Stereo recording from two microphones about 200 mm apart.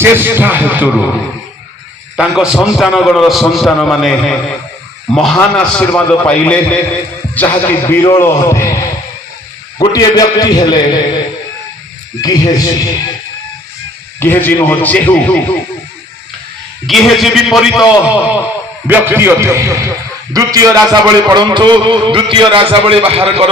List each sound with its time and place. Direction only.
0.0 s a man's voice: 10° right (ahead or behind)
2.1 s a man's voice: 5° right (ahead or behind); by 11.0 s 20° left (ahead or behind)
12.2 s a man's voice: 20° left (ahead or behind)
14.2 s a man's voice: 10° left (ahead or behind)
16.8 s a man's voice: centre (ahead or behind); by 23.5 s 30° right (ahead or behind)